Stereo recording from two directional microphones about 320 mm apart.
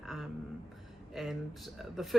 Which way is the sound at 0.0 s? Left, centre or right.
Centre.